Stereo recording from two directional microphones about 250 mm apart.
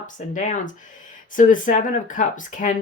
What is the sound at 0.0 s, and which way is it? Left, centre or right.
A woman's voice, left.